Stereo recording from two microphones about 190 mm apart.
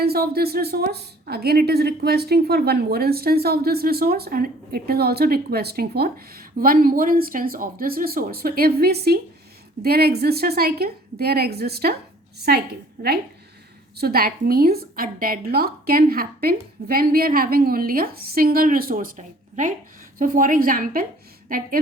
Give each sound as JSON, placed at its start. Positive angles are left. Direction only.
{"t": 0.0, "sound": "a woman's voice", "side_deg": -55}
{"t": 14.0, "sound": "a woman's voice", "side_deg": -50}